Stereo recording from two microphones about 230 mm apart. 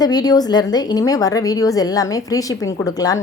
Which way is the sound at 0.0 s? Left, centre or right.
Centre.